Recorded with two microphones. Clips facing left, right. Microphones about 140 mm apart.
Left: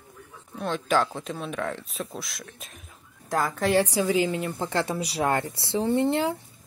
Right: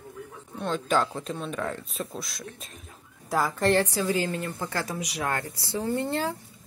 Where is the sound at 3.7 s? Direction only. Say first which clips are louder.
Left 2 dB; 15° left (ahead or behind).